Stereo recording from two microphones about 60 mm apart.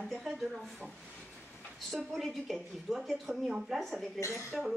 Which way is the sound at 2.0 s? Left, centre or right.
Centre.